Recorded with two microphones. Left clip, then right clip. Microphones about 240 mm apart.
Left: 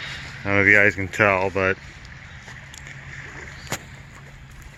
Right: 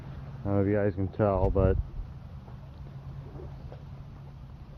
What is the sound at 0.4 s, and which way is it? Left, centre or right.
Speech, centre.